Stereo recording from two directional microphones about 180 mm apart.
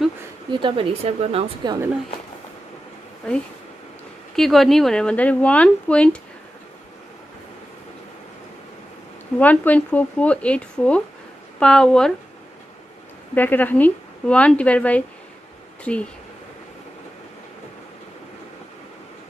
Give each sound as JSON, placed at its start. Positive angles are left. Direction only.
{"t": 0.5, "sound": "speech", "side_deg": -25}
{"t": 4.4, "sound": "speech", "side_deg": 0}
{"t": 9.4, "sound": "a woman's voice", "side_deg": 10}
{"t": 13.3, "sound": "a woman's voice", "side_deg": 10}